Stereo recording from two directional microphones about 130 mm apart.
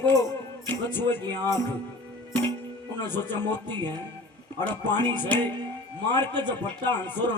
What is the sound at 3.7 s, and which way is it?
Speech, 35° right (ahead or behind).